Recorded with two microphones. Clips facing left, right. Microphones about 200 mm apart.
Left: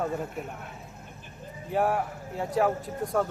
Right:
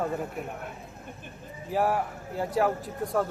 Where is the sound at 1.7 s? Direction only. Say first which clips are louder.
Even; centre (ahead or behind).